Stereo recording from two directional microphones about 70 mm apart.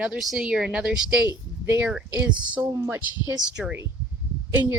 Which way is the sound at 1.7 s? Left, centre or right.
Right.